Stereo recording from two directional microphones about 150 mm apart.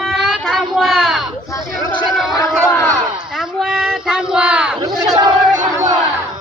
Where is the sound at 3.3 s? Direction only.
5° right (ahead or behind).